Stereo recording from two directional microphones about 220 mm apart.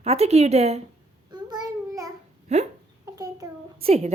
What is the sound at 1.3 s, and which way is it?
Child singing, 20° right (ahead or behind).